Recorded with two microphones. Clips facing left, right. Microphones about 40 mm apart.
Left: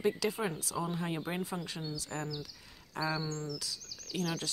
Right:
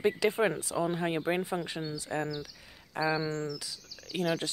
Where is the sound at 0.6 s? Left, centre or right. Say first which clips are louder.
Right 5 dB; right.